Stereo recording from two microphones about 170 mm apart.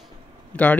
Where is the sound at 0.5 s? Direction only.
5° left (ahead or behind).